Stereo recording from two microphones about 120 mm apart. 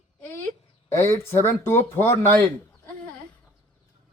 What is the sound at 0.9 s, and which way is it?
Speech, 20° left (ahead or behind).